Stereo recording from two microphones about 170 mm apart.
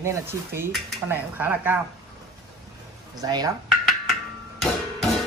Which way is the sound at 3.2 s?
20° right (ahead or behind).